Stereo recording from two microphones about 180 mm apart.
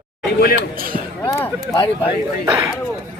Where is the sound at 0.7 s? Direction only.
50° right (ahead or behind).